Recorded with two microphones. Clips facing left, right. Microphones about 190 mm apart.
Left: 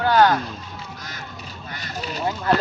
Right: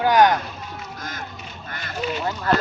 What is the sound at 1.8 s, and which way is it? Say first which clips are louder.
Speech: right 3 dB; 40° left (ahead or behind).